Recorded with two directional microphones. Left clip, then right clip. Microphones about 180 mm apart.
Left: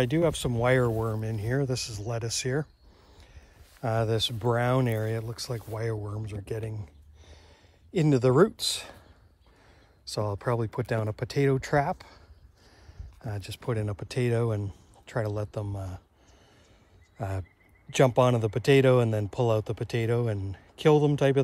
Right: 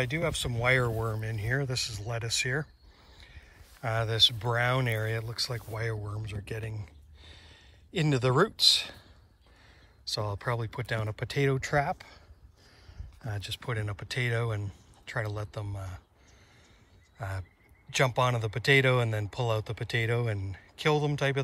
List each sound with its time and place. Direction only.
0.0 s speech: 15° left (ahead or behind)
10.1 s speech: 15° left (ahead or behind)
13.5 s speech: 15° left (ahead or behind)
17.2 s speech: 15° left (ahead or behind)